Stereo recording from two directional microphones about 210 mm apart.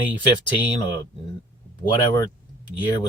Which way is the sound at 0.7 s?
20° left (ahead or behind).